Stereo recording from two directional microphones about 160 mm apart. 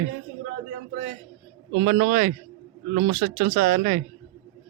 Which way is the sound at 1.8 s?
75° right (ahead or behind).